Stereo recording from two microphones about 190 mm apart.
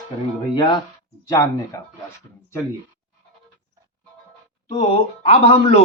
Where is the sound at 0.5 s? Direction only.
25° left (ahead or behind).